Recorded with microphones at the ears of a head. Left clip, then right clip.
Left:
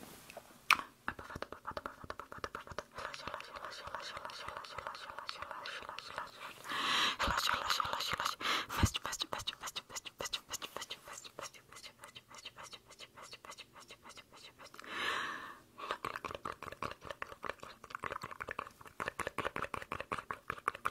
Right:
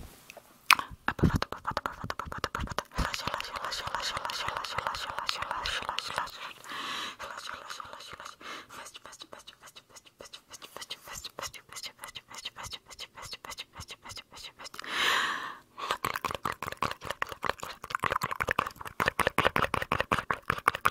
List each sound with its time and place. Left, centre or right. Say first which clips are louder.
0.7 s chewing: right 7 dB; right
7.1 s whispering: left 6 dB; left
10.9 s whispering: right 6 dB; right
14.8 s a sound: right 10 dB; right